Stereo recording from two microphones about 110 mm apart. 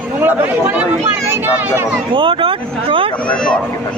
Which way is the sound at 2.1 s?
55° right (ahead or behind).